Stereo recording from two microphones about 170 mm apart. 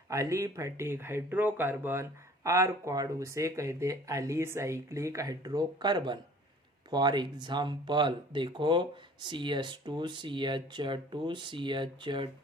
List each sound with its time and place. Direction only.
0.1 s speech: 15° right (ahead or behind)